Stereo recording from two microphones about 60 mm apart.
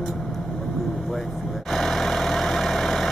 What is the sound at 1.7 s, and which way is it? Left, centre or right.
Vehicle, centre.